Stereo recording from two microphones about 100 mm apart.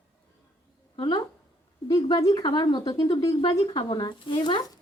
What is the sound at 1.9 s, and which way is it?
Speech, 40° left (ahead or behind).